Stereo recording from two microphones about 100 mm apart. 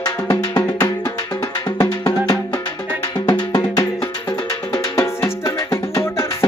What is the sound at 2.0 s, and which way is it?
Music, 45° left (ahead or behind).